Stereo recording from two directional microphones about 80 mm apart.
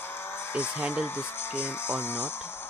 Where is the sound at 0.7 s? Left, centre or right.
Centre.